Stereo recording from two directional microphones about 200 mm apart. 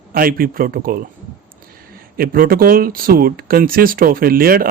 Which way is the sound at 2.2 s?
45° right (ahead or behind).